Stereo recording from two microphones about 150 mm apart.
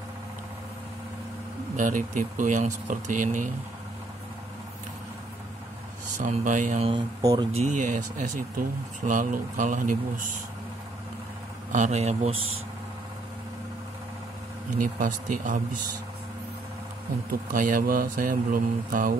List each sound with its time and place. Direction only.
1.8 s speech: 60° right (ahead or behind)
6.1 s speech: 55° right (ahead or behind)
7.2 s speech: 25° right (ahead or behind)
7.6 s speech: 55° right (ahead or behind)
11.7 s speech: 50° right (ahead or behind)
14.8 s speech: 65° right (ahead or behind)
17.5 s speech: 65° right (ahead or behind)